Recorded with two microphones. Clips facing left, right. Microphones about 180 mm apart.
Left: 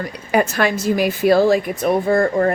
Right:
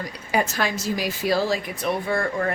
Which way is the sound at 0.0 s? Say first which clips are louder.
Left 6 dB; 60° left (ahead or behind).